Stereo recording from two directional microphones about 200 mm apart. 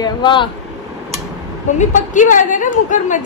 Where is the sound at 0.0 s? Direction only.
25° left (ahead or behind).